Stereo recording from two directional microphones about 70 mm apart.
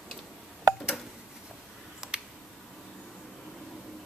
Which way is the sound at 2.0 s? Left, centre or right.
Centre.